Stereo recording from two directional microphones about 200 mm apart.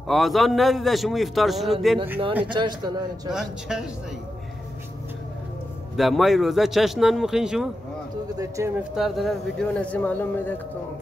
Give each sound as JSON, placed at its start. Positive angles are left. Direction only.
{"t": 0.1, "sound": "a man's voice", "side_deg": 0}
{"t": 2.5, "sound": "speech", "side_deg": -25}
{"t": 3.3, "sound": "a man's voice", "side_deg": -5}
{"t": 5.9, "sound": "a man's voice", "side_deg": 0}
{"t": 8.4, "sound": "speech", "side_deg": -15}
{"t": 8.9, "sound": "speech", "side_deg": 0}